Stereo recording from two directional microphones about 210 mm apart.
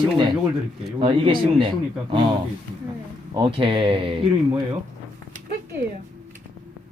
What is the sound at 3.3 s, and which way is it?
Speech, 25° right (ahead or behind).